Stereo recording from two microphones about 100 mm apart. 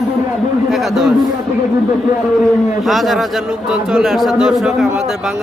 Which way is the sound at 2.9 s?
Centre (ahead or behind).